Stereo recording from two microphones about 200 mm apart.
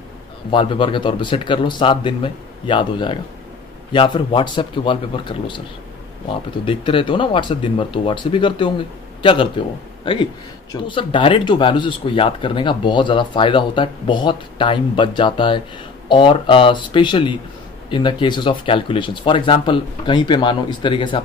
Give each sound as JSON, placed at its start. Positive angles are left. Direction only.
{"t": 0.5, "sound": "speech", "side_deg": 25}
{"t": 6.6, "sound": "speech", "side_deg": 25}
{"t": 10.7, "sound": "speech", "side_deg": 25}